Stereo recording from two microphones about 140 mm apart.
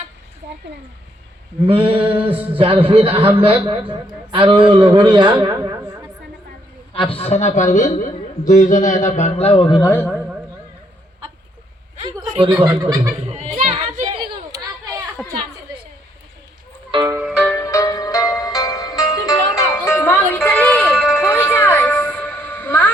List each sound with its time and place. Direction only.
1.6 s speech: 40° right (ahead or behind)
6.9 s a man's voice: 40° left (ahead or behind)
9.6 s a man's voice: 30° left (ahead or behind)
12.5 s speech: 10° right (ahead or behind)
13.3 s a sound: 50° right (ahead or behind)
14.0 s a sound: 35° right (ahead or behind)
15.2 s a sound: centre (ahead or behind)
16.9 s music: 35° right (ahead or behind)
17.6 s music: 20° left (ahead or behind)